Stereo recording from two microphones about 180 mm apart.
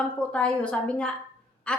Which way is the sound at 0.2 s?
5° left (ahead or behind).